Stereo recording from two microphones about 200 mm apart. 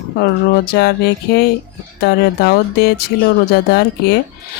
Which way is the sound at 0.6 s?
55° left (ahead or behind).